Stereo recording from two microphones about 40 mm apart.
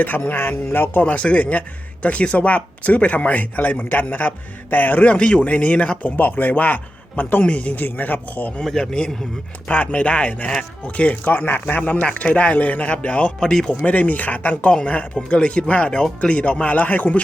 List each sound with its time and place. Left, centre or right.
0.0 s speech: left
0.3 s speech: left
1.0 s speech: left
5.1 s a man's voice: left
7.4 s speech: left
8.8 s a man's voice: left
9.7 s speech: left
11.8 s speech: left
13.4 s speech: centre
13.7 s a man's voice: left